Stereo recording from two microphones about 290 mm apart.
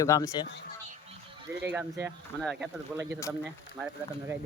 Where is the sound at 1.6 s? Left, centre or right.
Centre.